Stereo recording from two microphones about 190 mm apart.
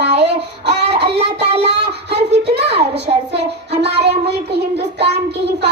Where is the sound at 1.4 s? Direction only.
35° right (ahead or behind).